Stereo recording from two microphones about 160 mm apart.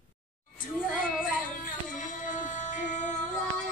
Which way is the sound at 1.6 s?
55° left (ahead or behind).